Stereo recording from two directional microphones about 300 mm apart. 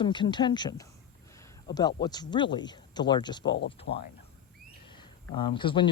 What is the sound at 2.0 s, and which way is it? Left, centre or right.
Speech, centre.